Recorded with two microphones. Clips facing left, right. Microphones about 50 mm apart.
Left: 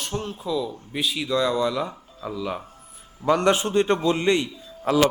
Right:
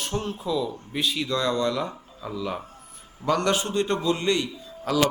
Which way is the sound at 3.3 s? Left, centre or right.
Left.